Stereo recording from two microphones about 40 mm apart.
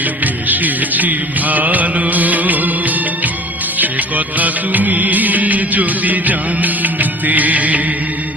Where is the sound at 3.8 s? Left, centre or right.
Right.